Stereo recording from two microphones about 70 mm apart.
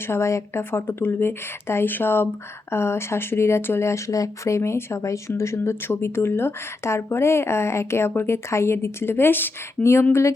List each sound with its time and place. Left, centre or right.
0.1 s speech: left